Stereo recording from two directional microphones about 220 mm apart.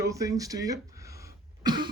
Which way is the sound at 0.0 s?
15° right (ahead or behind).